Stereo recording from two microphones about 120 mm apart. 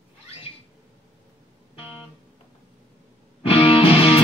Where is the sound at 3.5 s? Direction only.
50° left (ahead or behind).